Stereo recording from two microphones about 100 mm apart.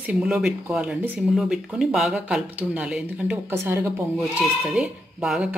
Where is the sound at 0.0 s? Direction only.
10° right (ahead or behind).